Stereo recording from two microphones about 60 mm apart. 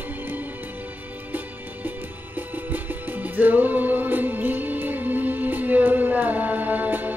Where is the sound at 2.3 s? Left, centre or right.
Right.